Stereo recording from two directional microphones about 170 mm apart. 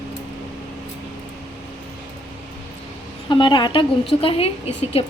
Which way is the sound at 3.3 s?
25° left (ahead or behind).